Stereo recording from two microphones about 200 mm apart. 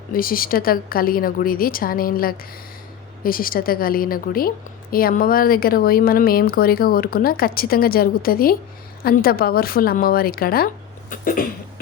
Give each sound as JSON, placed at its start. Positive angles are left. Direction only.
{"t": 0.1, "sound": "a woman's voice", "side_deg": 45}